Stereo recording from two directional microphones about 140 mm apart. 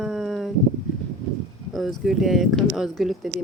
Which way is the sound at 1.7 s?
Centre (ahead or behind).